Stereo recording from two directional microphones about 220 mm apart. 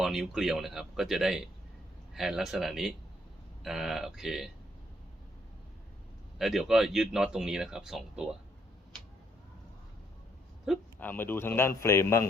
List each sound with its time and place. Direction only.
0.0 s speech: centre (ahead or behind)
6.4 s speech: centre (ahead or behind)
10.7 s speech: 10° left (ahead or behind)